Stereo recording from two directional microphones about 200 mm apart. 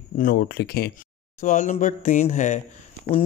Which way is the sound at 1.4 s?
40° left (ahead or behind).